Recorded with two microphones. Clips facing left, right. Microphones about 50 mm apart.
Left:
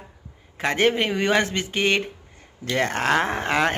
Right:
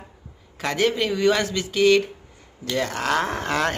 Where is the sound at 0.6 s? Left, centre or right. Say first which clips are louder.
Left 1 dB; left.